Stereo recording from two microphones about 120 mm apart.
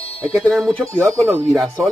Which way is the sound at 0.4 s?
Centre (ahead or behind).